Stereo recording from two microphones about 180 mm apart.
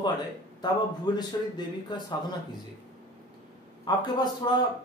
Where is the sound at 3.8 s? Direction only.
20° left (ahead or behind).